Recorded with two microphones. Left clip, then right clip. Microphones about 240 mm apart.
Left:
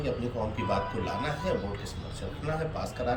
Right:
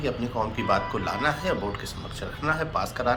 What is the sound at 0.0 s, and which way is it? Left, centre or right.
A man's voice, centre.